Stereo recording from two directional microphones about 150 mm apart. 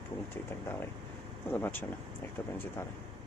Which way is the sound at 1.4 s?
15° left (ahead or behind).